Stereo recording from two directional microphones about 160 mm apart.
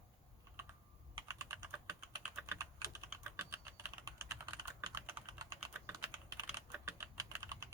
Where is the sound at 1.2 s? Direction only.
15° right (ahead or behind).